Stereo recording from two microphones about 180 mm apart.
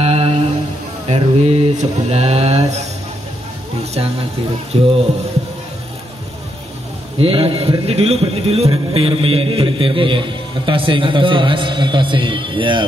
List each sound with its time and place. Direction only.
0.0 s music: 35° right (ahead or behind)
1.0 s mantra: 35° right (ahead or behind)
4.7 s speech: 35° right (ahead or behind)
7.2 s a man's voice: 30° right (ahead or behind)